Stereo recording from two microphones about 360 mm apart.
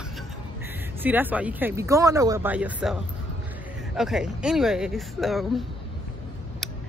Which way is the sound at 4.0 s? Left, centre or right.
Centre.